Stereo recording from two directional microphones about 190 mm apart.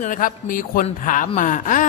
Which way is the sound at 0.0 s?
45° left (ahead or behind).